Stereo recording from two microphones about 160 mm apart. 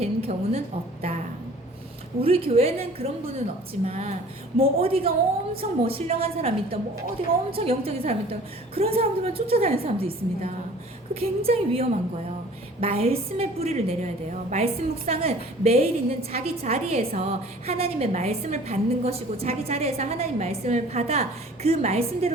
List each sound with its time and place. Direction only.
0.0 s a woman's voice: 40° right (ahead or behind)
2.2 s a woman's voice: 35° right (ahead or behind)